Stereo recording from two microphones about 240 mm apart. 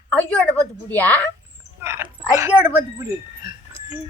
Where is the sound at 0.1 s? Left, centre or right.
Centre.